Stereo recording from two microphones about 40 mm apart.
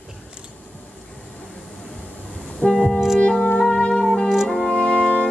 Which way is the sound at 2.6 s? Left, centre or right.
Centre.